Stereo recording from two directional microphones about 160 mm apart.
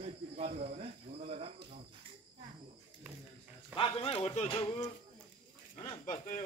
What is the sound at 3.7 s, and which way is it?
Speech, 35° left (ahead or behind).